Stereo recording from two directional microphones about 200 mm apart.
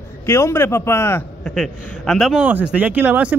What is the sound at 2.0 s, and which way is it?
Speech, centre (ahead or behind).